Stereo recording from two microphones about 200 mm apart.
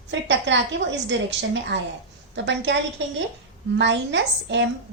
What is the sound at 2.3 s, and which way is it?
Speech, 60° right (ahead or behind).